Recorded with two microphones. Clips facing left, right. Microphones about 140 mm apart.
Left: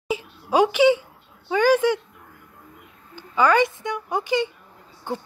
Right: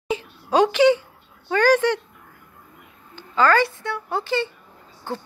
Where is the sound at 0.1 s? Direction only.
10° left (ahead or behind).